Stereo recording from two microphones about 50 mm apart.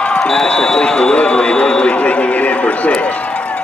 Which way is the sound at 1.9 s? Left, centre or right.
Left.